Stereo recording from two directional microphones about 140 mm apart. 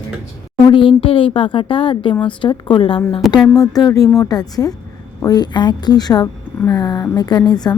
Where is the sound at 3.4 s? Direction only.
25° left (ahead or behind).